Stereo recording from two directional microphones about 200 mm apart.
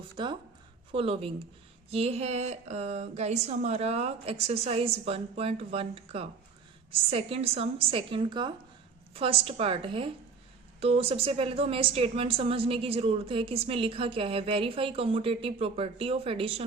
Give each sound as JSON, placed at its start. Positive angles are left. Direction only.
{"t": 0.2, "sound": "a woman's voice", "side_deg": -25}